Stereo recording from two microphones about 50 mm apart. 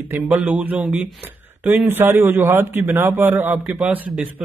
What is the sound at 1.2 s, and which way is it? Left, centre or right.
Speech, right.